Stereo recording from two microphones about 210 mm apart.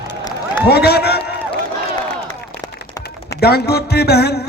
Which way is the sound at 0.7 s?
50° left (ahead or behind).